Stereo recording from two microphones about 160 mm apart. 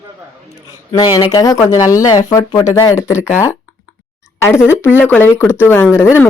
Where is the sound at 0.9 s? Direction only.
25° left (ahead or behind).